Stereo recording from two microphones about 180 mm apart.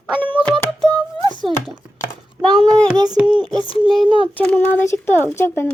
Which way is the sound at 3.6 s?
30° left (ahead or behind).